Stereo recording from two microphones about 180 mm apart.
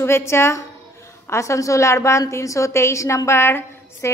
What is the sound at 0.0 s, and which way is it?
A woman's voice, 15° left (ahead or behind).